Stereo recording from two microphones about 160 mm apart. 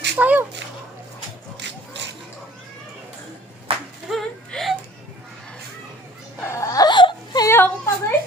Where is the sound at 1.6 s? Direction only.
90° right.